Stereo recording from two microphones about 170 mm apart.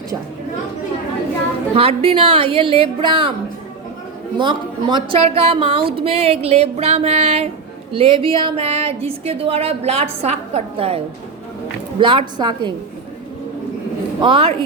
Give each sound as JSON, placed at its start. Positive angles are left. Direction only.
{"t": 1.7, "sound": "speech", "side_deg": -35}
{"t": 4.4, "sound": "a woman's voice", "side_deg": -25}
{"t": 14.2, "sound": "speech", "side_deg": -30}